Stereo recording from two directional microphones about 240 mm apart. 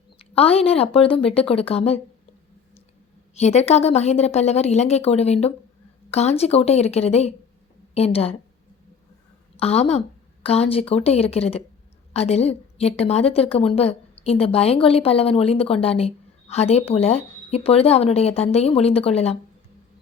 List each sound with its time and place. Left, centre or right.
0.2 s a woman's voice: left
3.3 s a woman's voice: left
9.6 s a woman's voice: left